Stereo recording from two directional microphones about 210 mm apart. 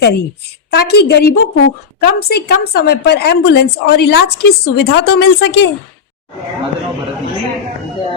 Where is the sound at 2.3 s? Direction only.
50° left (ahead or behind).